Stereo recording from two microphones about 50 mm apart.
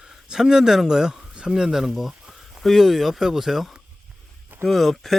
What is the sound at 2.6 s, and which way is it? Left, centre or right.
Speech, centre.